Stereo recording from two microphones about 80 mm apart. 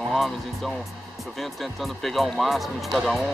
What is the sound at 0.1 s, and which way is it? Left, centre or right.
Speech, centre.